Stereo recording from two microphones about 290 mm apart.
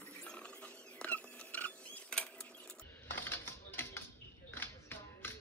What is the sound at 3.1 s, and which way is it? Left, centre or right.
Music, centre.